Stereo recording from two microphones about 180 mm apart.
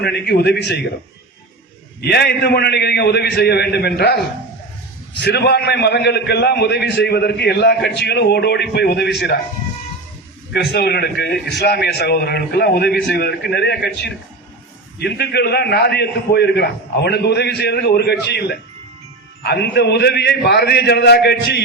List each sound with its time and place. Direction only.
0.0 s a man's voice: 65° left (ahead or behind)
2.0 s a man's voice: 65° left (ahead or behind)
5.2 s a man's voice: 65° left (ahead or behind)
10.5 s a man's voice: 70° left (ahead or behind)